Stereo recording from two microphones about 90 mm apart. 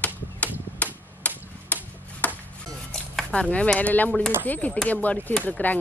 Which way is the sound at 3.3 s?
15° left (ahead or behind).